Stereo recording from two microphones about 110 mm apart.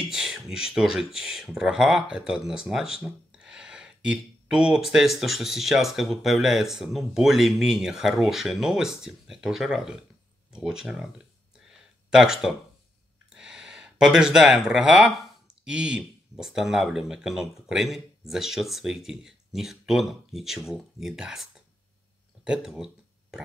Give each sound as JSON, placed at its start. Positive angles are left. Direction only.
{"t": 0.1, "sound": "speech", "side_deg": -5}
{"t": 12.1, "sound": "speech", "side_deg": -5}